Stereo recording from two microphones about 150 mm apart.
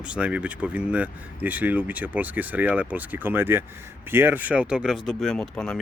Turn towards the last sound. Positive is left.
turn(degrees=5)  # may be behind; listen again after turning